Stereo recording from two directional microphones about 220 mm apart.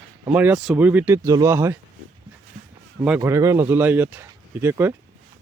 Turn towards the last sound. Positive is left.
turn(degrees=-10)  # may be behind; listen again after turning